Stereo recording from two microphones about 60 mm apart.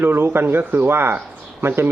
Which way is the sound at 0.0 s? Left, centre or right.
Right.